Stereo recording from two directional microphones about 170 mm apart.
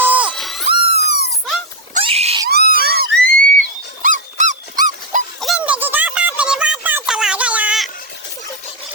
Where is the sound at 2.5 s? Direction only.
65° right (ahead or behind).